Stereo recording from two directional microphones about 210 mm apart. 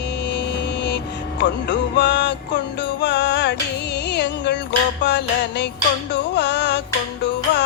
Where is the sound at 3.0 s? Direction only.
55° left (ahead or behind).